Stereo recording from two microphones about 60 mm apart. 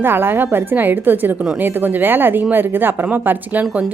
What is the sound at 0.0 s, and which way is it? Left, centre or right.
A woman's voice, right.